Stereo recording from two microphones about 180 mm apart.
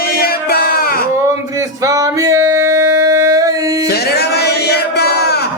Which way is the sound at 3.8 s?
65° left (ahead or behind).